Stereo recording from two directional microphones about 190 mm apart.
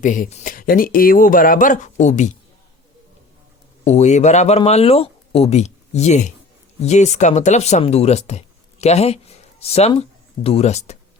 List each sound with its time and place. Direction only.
0.0 s speech: 45° left (ahead or behind)
3.8 s speech: 35° left (ahead or behind)